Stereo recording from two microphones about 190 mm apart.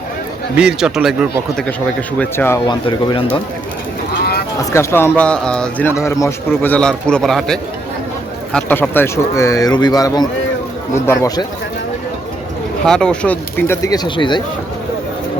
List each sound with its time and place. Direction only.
0.5 s speech: 5° right (ahead or behind); by 2.7 s 10° left (ahead or behind)
2.8 s speech: 25° left (ahead or behind)
4.2 s a sound: 55° left (ahead or behind)
4.7 s speech: 15° left (ahead or behind)
12.8 s speech: 5° left (ahead or behind); by 14.4 s 25° left (ahead or behind)